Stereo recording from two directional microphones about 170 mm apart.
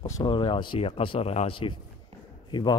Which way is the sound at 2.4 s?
25° left (ahead or behind).